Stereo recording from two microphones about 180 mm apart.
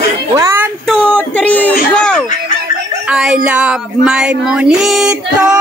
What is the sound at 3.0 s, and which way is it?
Speech, 5° right (ahead or behind).